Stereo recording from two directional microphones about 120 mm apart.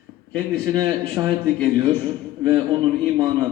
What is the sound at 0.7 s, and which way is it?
Speech, 35° right (ahead or behind).